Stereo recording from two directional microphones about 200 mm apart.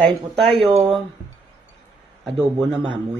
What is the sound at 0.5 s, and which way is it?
Speech, 25° right (ahead or behind).